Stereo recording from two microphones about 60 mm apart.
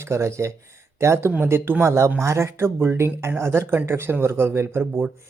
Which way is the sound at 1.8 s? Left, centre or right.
Right.